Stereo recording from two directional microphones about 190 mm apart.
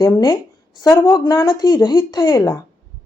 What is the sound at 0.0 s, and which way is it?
Speech, 20° left (ahead or behind).